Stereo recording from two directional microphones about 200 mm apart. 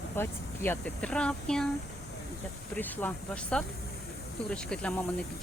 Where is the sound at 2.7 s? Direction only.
10° left (ahead or behind).